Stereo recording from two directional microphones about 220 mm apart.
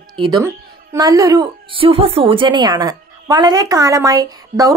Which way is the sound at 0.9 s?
15° right (ahead or behind).